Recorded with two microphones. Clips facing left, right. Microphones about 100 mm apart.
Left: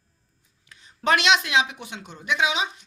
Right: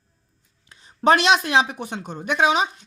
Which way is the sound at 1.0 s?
35° right (ahead or behind).